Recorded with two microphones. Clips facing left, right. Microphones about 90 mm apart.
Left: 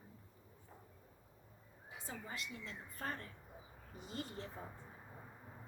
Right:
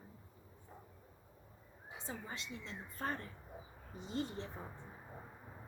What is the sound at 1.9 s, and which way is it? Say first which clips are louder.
Speech: right 2 dB; 25° right (ahead or behind).